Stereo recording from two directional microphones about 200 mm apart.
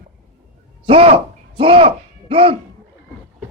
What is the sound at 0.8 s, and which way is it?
Speech, 30° right (ahead or behind).